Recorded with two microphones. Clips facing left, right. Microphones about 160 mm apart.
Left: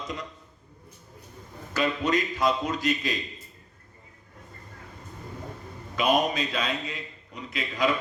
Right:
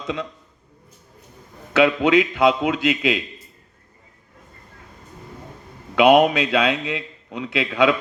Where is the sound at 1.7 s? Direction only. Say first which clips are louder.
Right 9 dB; 75° right (ahead or behind).